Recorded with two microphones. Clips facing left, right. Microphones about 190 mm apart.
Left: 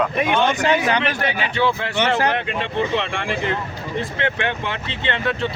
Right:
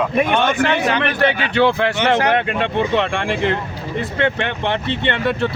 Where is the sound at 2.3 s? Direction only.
60° right (ahead or behind).